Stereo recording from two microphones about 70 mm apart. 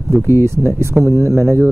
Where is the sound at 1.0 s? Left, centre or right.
Right.